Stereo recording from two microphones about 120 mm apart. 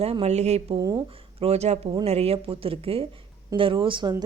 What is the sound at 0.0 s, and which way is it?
Speech, 55° right (ahead or behind).